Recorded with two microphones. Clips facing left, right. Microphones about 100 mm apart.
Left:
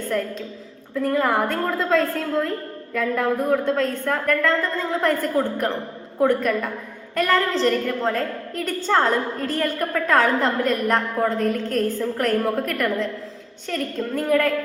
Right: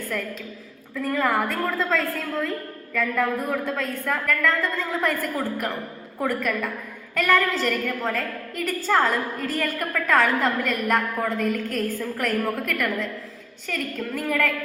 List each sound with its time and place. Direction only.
0.9 s a woman's voice: 30° left (ahead or behind)
12.1 s a woman's voice: 40° left (ahead or behind)
12.4 s a woman's voice: 30° left (ahead or behind)